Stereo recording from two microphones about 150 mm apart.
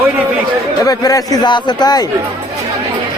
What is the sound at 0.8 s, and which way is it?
A man's voice, 25° left (ahead or behind).